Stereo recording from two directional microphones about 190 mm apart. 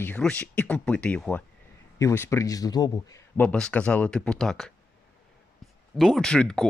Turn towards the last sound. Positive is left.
turn(degrees=5)  # may be behind; listen again after turning